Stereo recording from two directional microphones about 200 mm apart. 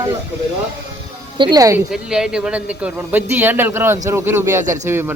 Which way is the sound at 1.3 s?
20° right (ahead or behind).